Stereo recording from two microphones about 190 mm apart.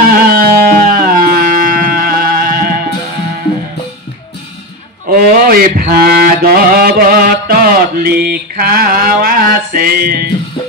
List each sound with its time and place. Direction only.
0.3 s music: 50° right (ahead or behind)
5.1 s mantra: 50° right (ahead or behind)